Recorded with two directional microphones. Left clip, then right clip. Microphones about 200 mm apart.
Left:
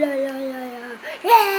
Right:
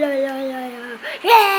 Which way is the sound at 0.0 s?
10° right (ahead or behind).